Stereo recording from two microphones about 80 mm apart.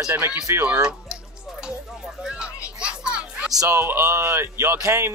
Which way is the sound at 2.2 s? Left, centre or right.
Centre.